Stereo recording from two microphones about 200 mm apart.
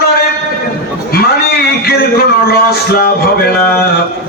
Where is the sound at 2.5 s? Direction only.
50° left (ahead or behind).